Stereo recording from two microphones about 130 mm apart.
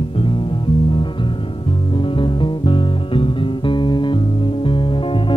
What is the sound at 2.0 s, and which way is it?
Music, 40° left (ahead or behind).